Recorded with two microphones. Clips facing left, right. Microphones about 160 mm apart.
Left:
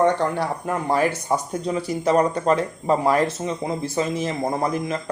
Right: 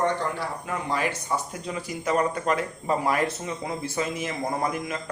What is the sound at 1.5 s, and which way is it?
Speech, 35° left (ahead or behind).